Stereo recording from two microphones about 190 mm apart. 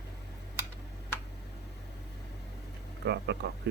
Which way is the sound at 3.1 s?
60° right (ahead or behind).